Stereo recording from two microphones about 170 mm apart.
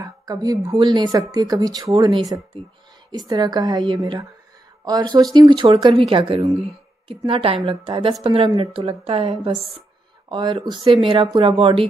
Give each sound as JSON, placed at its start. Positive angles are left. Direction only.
{"t": 0.0, "sound": "a woman's voice", "side_deg": -20}